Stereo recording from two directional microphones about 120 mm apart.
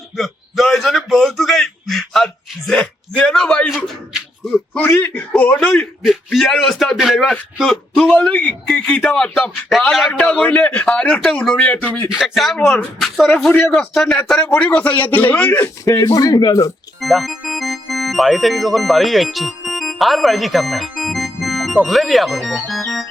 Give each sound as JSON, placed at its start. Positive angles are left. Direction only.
{"t": 0.2, "sound": "a sound", "side_deg": 0}
{"t": 6.0, "sound": "a sound", "side_deg": 0}
{"t": 8.6, "sound": "speech", "side_deg": 5}
{"t": 10.1, "sound": "a man's voice", "side_deg": 10}
{"t": 12.0, "sound": "a man's voice", "side_deg": 0}
{"t": 15.8, "sound": "speech", "side_deg": 25}
{"t": 17.0, "sound": "speech", "side_deg": 0}